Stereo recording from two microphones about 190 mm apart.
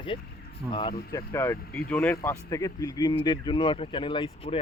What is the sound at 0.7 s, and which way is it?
Speech, 25° left (ahead or behind).